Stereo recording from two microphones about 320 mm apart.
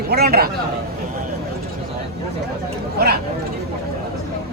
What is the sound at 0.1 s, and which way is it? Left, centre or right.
Speech, right.